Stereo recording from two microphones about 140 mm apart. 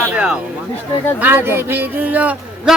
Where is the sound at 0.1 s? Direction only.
10° right (ahead or behind).